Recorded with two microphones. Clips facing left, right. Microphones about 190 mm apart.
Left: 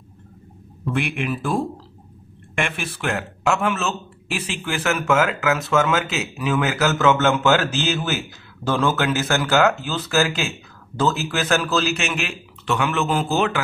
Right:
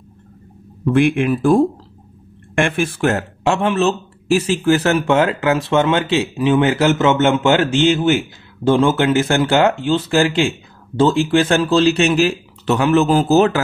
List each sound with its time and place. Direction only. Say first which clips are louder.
1.2 s speech: right 10 dB; 50° right (ahead or behind)